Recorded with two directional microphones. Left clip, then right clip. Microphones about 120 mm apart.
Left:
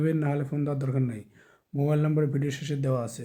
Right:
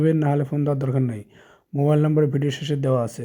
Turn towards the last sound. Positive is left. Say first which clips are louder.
# right 8 dB
turn(degrees=-40)  # may be behind; listen again after turning